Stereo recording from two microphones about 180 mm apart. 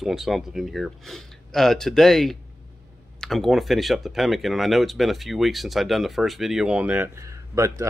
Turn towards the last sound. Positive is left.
turn(degrees=-20)  # may be behind; listen again after turning